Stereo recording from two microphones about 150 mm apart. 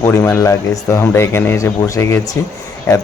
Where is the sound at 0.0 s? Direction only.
20° left (ahead or behind).